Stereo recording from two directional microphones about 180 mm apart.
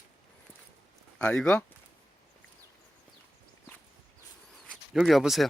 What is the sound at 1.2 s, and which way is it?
Speech, 5° left (ahead or behind).